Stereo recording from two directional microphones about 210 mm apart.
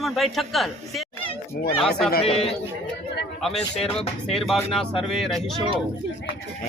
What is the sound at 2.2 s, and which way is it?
Speech, 30° left (ahead or behind).